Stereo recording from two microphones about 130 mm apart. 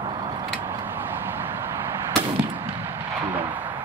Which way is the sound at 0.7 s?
15° right (ahead or behind).